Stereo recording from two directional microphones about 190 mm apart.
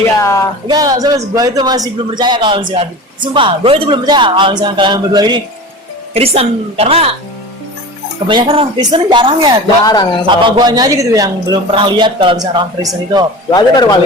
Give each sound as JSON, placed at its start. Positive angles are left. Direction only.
{"t": 0.2, "sound": "a sound", "side_deg": 15}
{"t": 0.7, "sound": "a man's voice", "side_deg": -20}
{"t": 8.3, "sound": "a man's voice", "side_deg": -25}
{"t": 9.8, "sound": "speech", "side_deg": 20}
{"t": 10.2, "sound": "a man's voice", "side_deg": -25}
{"t": 13.5, "sound": "speech", "side_deg": 20}